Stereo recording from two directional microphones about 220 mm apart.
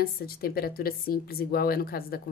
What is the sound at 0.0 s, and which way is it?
Speech, 45° left (ahead or behind).